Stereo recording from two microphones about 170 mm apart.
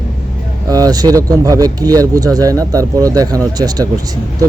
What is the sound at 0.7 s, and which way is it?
Speech, 20° right (ahead or behind).